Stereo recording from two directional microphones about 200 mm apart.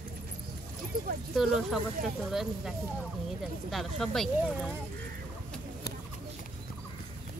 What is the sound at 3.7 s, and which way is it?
Speech, centre (ahead or behind).